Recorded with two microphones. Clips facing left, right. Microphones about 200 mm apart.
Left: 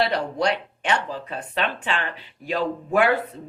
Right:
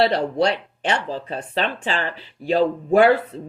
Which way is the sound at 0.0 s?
30° right (ahead or behind).